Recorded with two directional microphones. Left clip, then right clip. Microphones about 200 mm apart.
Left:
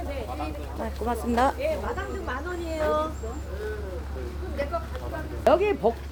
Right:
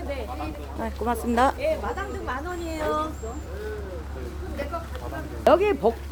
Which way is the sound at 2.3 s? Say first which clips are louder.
Even; 55° right (ahead or behind).